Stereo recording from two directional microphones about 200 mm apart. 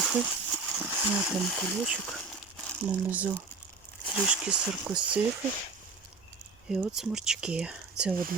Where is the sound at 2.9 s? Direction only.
10° right (ahead or behind).